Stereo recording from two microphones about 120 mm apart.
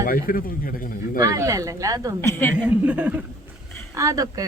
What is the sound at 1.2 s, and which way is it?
Speech, 30° right (ahead or behind).